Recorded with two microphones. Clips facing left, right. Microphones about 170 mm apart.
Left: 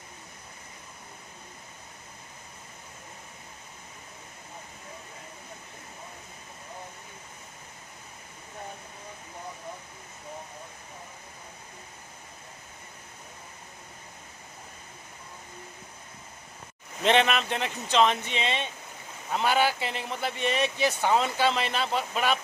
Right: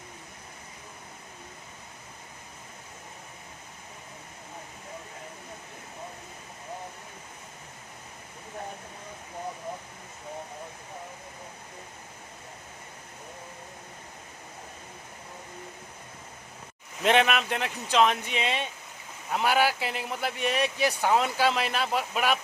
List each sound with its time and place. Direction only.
17.0 s speech: 5° right (ahead or behind)